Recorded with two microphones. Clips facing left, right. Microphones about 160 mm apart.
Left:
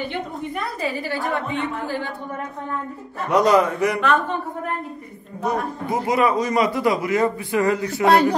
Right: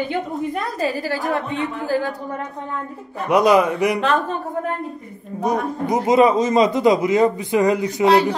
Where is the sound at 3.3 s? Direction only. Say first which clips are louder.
Right 2 dB; 10° right (ahead or behind).